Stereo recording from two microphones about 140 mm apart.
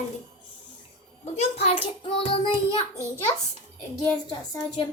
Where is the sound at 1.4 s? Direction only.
45° left (ahead or behind).